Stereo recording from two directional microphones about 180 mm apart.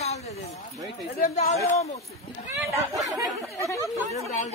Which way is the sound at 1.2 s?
40° left (ahead or behind).